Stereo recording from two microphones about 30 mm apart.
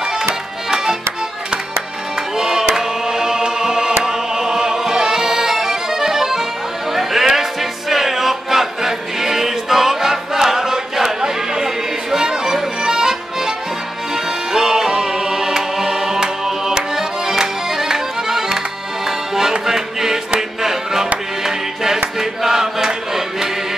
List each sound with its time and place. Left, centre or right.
0.2 s music: centre
2.3 s music: centre
6.9 s chatter: centre
7.9 s music: centre
14.5 s music: centre
19.0 s accordion: centre
19.6 s music: centre